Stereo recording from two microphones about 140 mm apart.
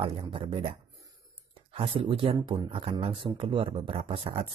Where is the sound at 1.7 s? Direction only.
40° right (ahead or behind).